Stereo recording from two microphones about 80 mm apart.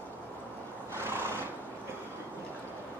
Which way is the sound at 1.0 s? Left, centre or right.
Right.